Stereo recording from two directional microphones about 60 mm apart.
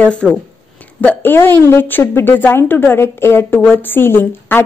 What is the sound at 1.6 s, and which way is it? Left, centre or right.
A woman's voice, left.